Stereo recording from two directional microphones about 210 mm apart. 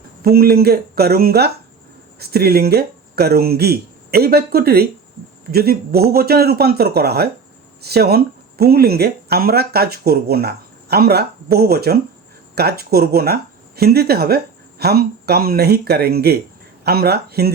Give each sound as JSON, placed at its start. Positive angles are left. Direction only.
{"t": 0.2, "sound": "speech", "side_deg": -45}